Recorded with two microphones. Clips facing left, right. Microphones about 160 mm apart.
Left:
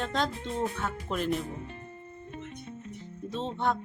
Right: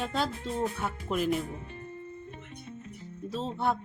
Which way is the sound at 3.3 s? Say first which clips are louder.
Even; 5° right (ahead or behind).